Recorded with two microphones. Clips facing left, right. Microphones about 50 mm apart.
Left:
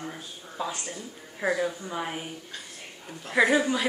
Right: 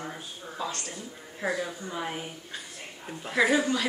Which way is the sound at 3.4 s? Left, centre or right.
Centre.